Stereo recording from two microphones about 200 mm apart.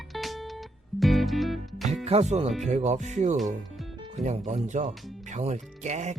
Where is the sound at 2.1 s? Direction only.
30° right (ahead or behind).